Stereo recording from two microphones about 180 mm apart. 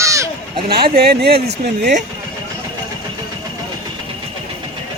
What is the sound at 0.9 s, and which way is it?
Speech, 60° right (ahead or behind).